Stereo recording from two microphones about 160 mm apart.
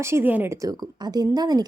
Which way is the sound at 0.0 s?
15° right (ahead or behind).